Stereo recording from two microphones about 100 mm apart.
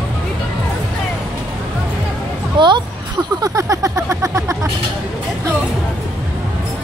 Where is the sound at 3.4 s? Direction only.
35° right (ahead or behind).